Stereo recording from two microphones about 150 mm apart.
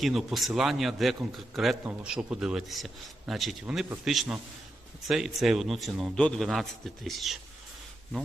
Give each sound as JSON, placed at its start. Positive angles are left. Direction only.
{"t": 0.0, "sound": "a man's voice", "side_deg": 0}